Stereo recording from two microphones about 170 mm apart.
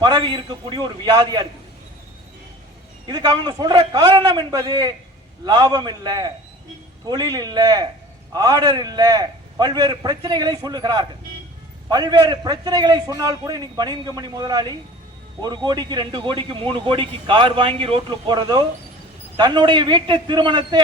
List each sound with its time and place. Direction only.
0.0 s a man's voice: 25° right (ahead or behind)
3.1 s a man's voice: 25° right (ahead or behind)